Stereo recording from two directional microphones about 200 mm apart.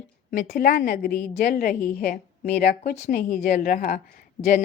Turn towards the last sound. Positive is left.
turn(degrees=45)  # may be behind; listen again after turning